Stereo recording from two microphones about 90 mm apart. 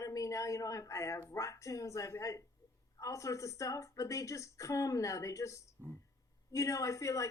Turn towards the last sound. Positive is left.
turn(degrees=35)  # may be behind; listen again after turning